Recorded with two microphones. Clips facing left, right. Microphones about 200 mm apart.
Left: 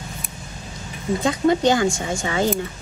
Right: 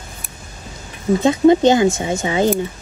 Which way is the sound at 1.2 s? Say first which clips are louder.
Right 7 dB; 20° right (ahead or behind).